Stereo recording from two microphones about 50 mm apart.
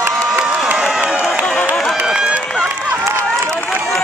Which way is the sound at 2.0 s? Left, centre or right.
Centre.